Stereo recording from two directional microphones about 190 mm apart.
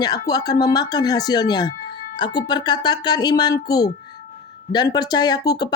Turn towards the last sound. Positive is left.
turn(degrees=20)  # may be behind; listen again after turning